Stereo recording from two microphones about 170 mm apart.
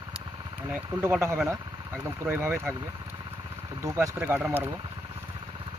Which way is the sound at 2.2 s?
15° right (ahead or behind).